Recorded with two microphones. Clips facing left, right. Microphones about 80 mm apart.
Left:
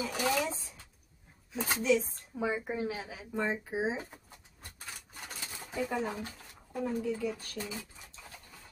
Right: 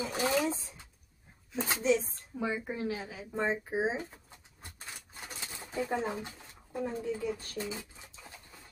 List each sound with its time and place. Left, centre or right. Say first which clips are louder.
0.0 s a sound: right 1 dB; right
1.7 s speech: even; right
2.3 s a woman's voice: left 1 dB; centre
3.3 s speech: right 1 dB; right
5.8 s speech: right 1 dB; right